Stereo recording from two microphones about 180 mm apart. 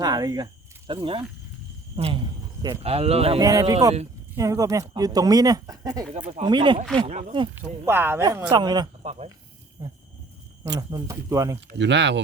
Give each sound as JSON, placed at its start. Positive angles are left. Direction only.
{"t": 0.0, "sound": "speech", "side_deg": -20}
{"t": 3.4, "sound": "speech", "side_deg": -20}
{"t": 6.9, "sound": "speech", "side_deg": -40}
{"t": 7.6, "sound": "speech", "side_deg": -15}
{"t": 9.0, "sound": "speech", "side_deg": -35}
{"t": 9.8, "sound": "speech", "side_deg": -20}
{"t": 11.8, "sound": "speech", "side_deg": -80}